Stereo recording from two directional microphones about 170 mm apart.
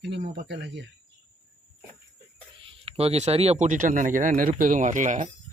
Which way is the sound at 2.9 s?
35° right (ahead or behind).